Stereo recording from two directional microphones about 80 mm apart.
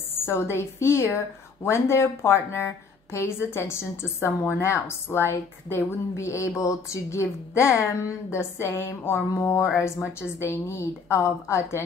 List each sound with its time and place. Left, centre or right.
0.3 s a woman's voice: left